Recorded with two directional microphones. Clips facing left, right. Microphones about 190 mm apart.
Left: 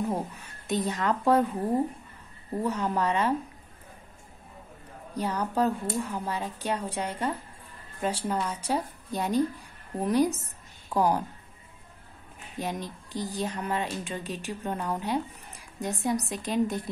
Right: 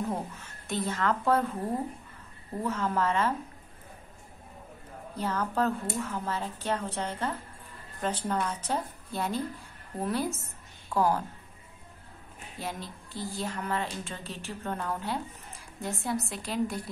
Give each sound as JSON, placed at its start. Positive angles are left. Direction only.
{"t": 0.1, "sound": "a woman's voice", "side_deg": 15}
{"t": 2.6, "sound": "a woman's voice", "side_deg": 15}
{"t": 5.1, "sound": "a woman's voice", "side_deg": 15}
{"t": 12.5, "sound": "a woman's voice", "side_deg": 15}